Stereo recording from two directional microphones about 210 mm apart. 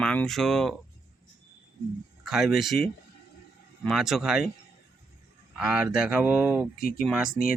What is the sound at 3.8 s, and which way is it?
Speech, centre (ahead or behind).